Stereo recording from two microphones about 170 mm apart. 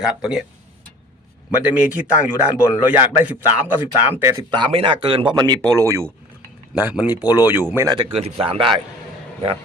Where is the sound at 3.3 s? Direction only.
10° right (ahead or behind).